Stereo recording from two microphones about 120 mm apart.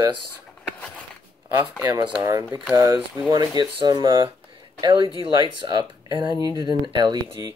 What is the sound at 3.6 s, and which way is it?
Speech, 35° right (ahead or behind).